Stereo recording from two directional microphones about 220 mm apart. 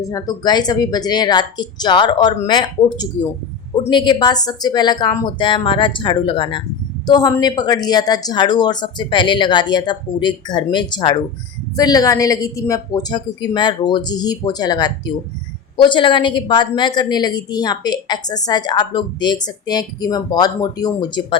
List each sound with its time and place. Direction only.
0.0 s a woman's voice: 15° left (ahead or behind)